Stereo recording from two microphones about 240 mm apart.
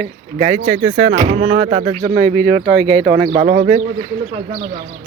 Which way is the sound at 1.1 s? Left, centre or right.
Right.